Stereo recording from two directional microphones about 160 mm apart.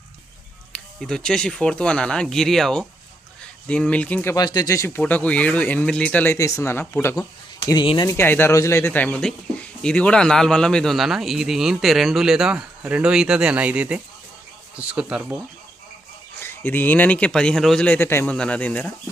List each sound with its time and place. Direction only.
0.7 s speech: 5° left (ahead or behind)
4.4 s speech: 25° left (ahead or behind)
8.1 s speech: 15° left (ahead or behind); by 15.4 s 10° right (ahead or behind)
16.4 s speech: 15° left (ahead or behind)